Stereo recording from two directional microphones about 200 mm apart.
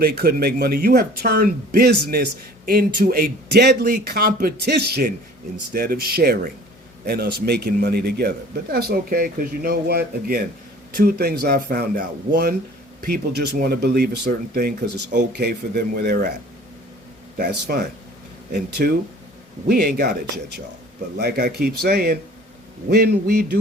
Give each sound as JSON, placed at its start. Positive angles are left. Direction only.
{"t": 0.0, "sound": "a man's voice", "side_deg": -50}
{"t": 17.3, "sound": "a man's voice", "side_deg": -50}
{"t": 21.2, "sound": "a man's voice", "side_deg": -55}